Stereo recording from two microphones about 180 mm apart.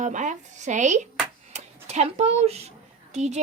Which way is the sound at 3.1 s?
40° right (ahead or behind).